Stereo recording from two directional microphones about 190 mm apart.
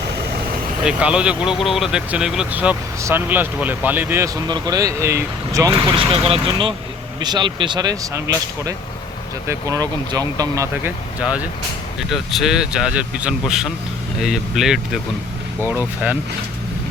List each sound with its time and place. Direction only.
0.9 s speech: 5° right (ahead or behind)
6.1 s speech: 30° right (ahead or behind)
11.2 s speech: 5° right (ahead or behind)